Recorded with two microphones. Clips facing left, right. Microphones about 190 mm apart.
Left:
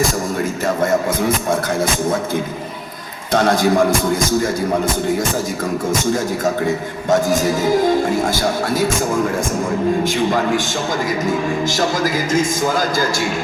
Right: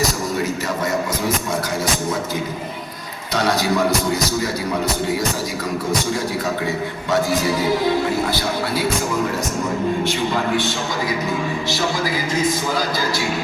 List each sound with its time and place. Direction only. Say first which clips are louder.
0.0 s a man's voice: left 2 dB; 50° left (ahead or behind)
5.9 s a man's voice: left 3 dB; 45° left (ahead or behind)
11.3 s a man's voice: left 4 dB; 45° left (ahead or behind)